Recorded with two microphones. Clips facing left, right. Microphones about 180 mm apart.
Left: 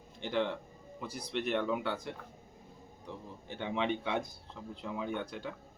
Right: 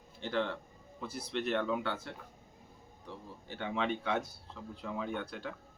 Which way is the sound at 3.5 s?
20° left (ahead or behind).